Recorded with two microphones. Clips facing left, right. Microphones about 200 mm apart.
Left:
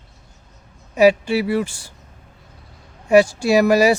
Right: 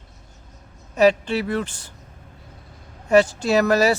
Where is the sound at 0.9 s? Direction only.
10° left (ahead or behind).